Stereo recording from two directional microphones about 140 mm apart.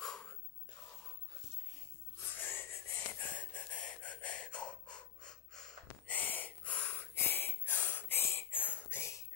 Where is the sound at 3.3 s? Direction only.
10° left (ahead or behind).